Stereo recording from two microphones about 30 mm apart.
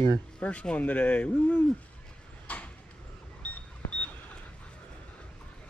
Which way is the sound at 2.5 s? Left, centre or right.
Left.